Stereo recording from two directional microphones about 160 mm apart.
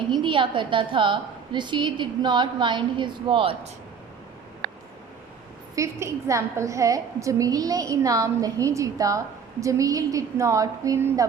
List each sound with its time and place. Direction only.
0.1 s a woman's voice: 30° right (ahead or behind)
5.7 s a woman's voice: 20° right (ahead or behind)